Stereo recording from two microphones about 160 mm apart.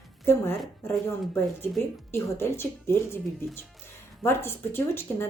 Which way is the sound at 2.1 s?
15° left (ahead or behind).